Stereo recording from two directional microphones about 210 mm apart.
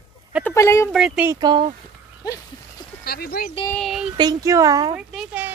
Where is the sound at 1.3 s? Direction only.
20° right (ahead or behind).